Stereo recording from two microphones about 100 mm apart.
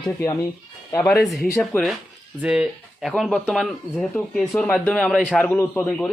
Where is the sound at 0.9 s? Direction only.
20° left (ahead or behind).